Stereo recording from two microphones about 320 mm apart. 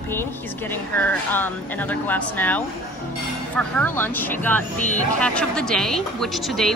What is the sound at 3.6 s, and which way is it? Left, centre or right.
Speech, centre.